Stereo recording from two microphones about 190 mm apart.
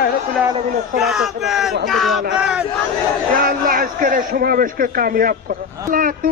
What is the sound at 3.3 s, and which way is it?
Speech, 50° right (ahead or behind).